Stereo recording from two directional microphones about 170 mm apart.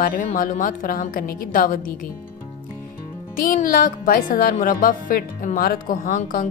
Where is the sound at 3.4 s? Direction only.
55° left (ahead or behind).